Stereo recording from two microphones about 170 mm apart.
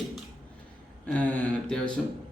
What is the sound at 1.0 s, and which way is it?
Speech, 10° left (ahead or behind).